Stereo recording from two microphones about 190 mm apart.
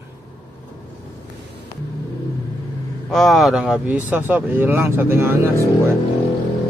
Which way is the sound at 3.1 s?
Centre (ahead or behind).